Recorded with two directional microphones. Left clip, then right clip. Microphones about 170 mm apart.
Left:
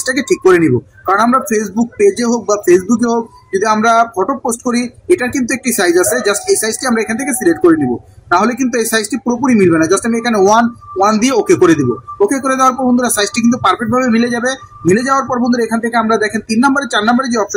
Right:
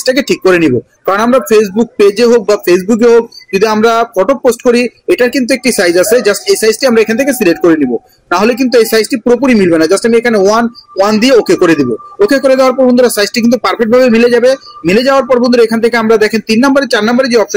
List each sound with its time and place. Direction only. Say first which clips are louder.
0.0 s speech: right 3 dB; 15° right (ahead or behind)